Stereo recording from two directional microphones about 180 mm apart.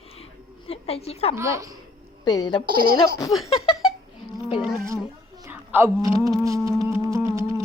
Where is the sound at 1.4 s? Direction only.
15° right (ahead or behind).